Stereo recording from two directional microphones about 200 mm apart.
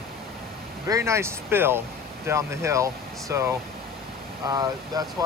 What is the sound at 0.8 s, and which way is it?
Speech, 15° right (ahead or behind).